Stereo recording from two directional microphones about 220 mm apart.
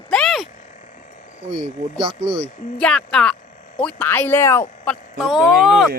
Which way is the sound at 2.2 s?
55° right (ahead or behind).